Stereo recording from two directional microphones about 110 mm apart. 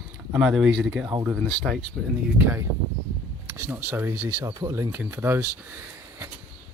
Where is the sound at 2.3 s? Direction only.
15° right (ahead or behind).